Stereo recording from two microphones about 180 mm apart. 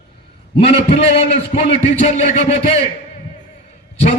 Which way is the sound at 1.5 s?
40° left (ahead or behind).